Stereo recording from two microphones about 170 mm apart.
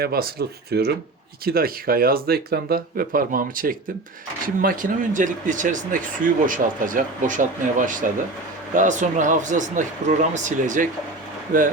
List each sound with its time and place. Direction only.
0.0 s speech: 65° right (ahead or behind)